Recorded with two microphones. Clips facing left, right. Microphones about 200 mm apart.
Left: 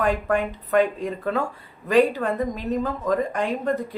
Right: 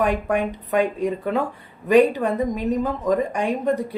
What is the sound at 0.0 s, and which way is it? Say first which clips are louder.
Speech: right 1 dB; 15° right (ahead or behind).